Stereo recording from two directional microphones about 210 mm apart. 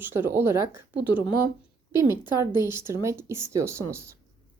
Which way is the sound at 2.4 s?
10° right (ahead or behind).